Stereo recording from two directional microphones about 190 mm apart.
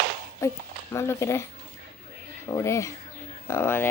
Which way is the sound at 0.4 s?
15° left (ahead or behind).